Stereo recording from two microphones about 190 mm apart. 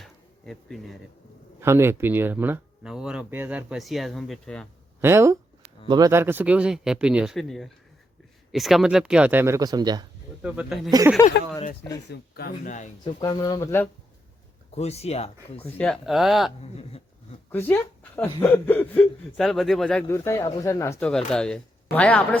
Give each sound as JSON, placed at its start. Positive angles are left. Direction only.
{"t": 0.0, "sound": "a sound", "side_deg": 0}
{"t": 1.6, "sound": "speech", "side_deg": -15}
{"t": 4.9, "sound": "speech", "side_deg": -15}
{"t": 10.4, "sound": "speech", "side_deg": -5}
{"t": 11.2, "sound": "speech", "side_deg": 20}
{"t": 12.3, "sound": "speech", "side_deg": 50}
{"t": 13.1, "sound": "speech", "side_deg": 25}
{"t": 14.8, "sound": "speech", "side_deg": 35}
{"t": 15.6, "sound": "speech", "side_deg": 5}
{"t": 17.5, "sound": "speech", "side_deg": 10}
{"t": 21.1, "sound": "speech", "side_deg": 5}